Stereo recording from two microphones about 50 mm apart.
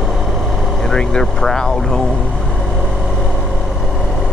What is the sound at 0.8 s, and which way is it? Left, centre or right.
Speech, centre.